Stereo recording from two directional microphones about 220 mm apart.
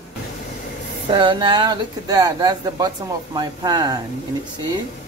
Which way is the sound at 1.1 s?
20° right (ahead or behind).